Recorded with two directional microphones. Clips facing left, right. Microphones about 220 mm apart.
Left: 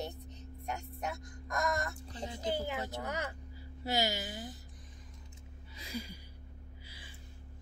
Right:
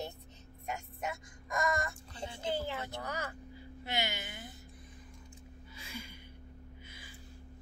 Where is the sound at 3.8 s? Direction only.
40° left (ahead or behind).